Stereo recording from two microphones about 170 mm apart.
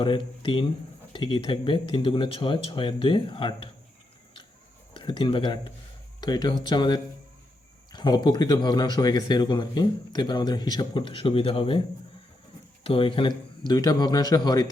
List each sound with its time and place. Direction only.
0.0 s speech: 30° left (ahead or behind)
4.9 s speech: 30° left (ahead or behind)
12.8 s speech: 30° left (ahead or behind)